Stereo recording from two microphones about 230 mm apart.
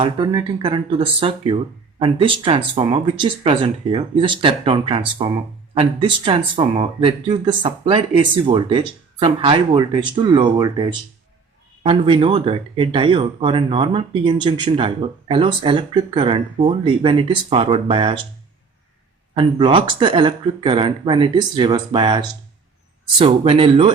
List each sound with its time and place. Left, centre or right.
0.0 s speech: right
19.3 s speech: right